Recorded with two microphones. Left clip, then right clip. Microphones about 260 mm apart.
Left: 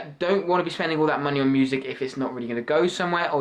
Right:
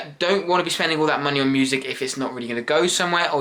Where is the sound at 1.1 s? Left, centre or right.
Centre.